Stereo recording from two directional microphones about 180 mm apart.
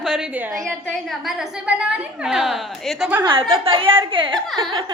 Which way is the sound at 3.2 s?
30° right (ahead or behind).